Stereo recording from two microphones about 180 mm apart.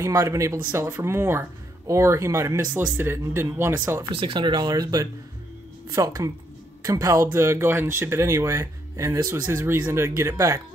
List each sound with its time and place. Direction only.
0.0 s speech: 15° right (ahead or behind)
4.1 s speech: 30° right (ahead or behind)